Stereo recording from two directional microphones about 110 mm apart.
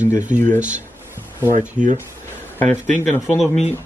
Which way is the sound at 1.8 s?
90° right.